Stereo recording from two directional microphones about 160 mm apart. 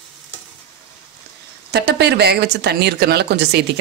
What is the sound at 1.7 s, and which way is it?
Speech, 90° right.